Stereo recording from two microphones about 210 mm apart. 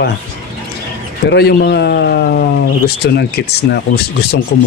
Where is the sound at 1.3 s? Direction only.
50° left (ahead or behind).